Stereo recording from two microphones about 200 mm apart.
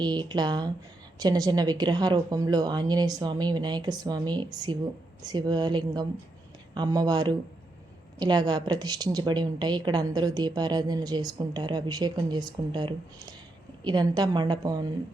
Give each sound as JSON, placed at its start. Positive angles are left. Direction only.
{"t": 0.0, "sound": "a woman's voice", "side_deg": -20}